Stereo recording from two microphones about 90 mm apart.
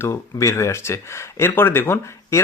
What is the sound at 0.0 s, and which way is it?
Speech, 35° left (ahead or behind).